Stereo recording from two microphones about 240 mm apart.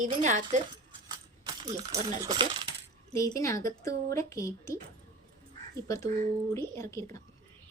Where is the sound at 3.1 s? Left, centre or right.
Centre.